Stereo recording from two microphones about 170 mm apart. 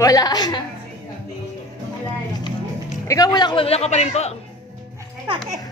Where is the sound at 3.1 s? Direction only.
20° left (ahead or behind); by 4.4 s 40° left (ahead or behind).